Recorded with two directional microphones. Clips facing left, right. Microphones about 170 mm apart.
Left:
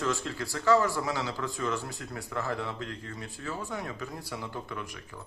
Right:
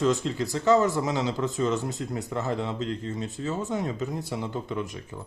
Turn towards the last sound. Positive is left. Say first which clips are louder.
# right 7 dB
turn(degrees=-20)  # may be behind; listen again after turning